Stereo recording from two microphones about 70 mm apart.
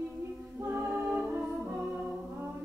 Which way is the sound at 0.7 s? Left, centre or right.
Right.